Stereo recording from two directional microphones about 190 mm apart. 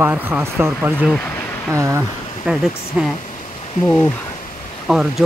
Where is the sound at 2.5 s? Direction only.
5° right (ahead or behind).